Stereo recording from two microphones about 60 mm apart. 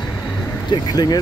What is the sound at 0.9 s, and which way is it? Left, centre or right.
Speech, left.